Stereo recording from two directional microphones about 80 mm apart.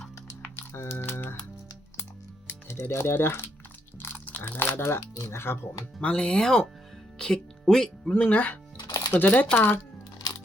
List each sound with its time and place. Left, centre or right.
0.5 s typing: left
2.5 s speech: left
4.9 s speech: left
6.0 s speech: centre
8.8 s music: left
9.1 s speech: left